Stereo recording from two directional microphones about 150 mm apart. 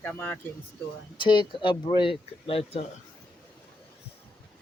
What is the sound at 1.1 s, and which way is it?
Speech, 30° left (ahead or behind).